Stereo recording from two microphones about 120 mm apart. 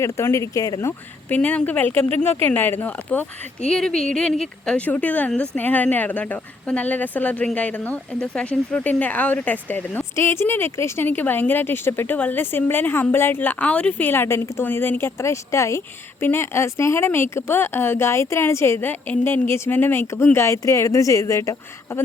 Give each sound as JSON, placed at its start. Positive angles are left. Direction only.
{"t": 0.0, "sound": "speech", "side_deg": 25}
{"t": 1.3, "sound": "speech", "side_deg": 15}